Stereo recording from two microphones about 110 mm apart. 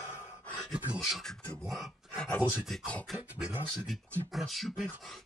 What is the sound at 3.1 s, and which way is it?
Speech, 5° right (ahead or behind).